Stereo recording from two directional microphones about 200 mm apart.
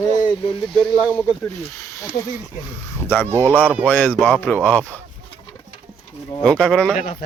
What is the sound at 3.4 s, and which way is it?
Speech, 10° left (ahead or behind).